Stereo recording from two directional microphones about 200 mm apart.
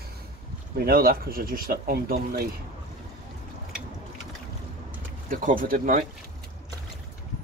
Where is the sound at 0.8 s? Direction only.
50° right (ahead or behind).